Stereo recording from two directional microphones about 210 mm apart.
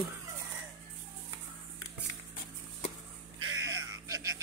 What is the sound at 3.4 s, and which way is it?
Cat, 65° right (ahead or behind).